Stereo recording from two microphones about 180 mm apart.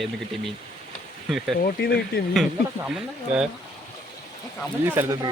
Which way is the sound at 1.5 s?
60° left (ahead or behind).